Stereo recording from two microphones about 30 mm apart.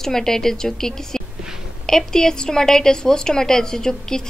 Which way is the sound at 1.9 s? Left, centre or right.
Centre.